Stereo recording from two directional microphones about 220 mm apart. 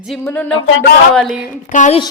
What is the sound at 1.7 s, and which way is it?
Speech, 35° left (ahead or behind).